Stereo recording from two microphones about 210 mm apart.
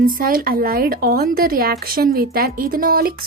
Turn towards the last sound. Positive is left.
turn(degrees=-45)  # may be behind; listen again after turning